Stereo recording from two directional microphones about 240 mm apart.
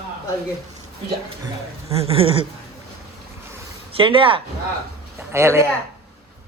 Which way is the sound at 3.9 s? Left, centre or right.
Right.